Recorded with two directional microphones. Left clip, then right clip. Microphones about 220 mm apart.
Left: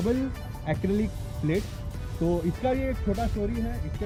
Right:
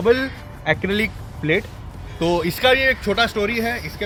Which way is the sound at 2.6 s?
25° right (ahead or behind).